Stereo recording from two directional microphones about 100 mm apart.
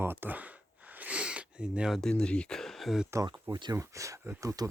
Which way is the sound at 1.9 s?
5° left (ahead or behind).